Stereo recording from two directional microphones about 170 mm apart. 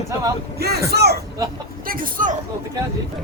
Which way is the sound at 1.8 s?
55° right (ahead or behind).